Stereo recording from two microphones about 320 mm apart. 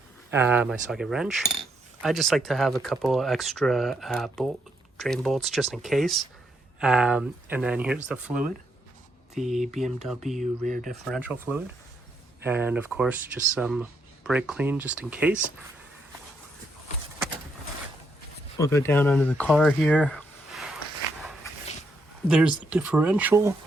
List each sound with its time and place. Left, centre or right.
0.3 s speech: centre
10.6 s speech: right
10.8 s speech: centre
18.5 s speech: centre
22.3 s speech: centre